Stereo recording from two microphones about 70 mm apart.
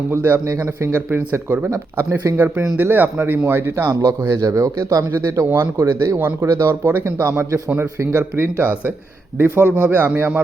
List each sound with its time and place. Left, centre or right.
0.1 s speech: right
0.4 s speech: right
2.0 s speech: right
2.7 s speech: right
4.2 s a man's voice: right
5.5 s a man's voice: right